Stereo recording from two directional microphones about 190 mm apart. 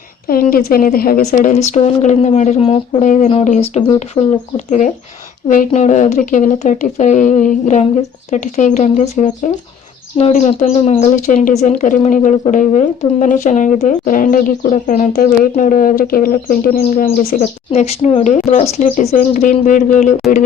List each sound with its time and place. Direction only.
0.3 s speech: 50° left (ahead or behind)
1.7 s speech: 40° left (ahead or behind)
19.1 s speech: 45° left (ahead or behind)